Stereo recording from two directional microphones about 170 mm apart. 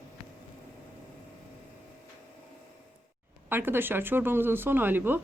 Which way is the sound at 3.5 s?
10° right (ahead or behind).